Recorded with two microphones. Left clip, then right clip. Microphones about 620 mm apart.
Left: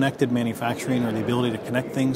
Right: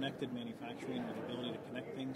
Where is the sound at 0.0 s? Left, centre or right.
Left.